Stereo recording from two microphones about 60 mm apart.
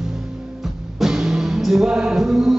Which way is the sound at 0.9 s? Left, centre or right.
Centre.